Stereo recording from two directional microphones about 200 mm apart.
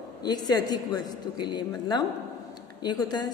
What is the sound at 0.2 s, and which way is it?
A woman's voice, 20° left (ahead or behind).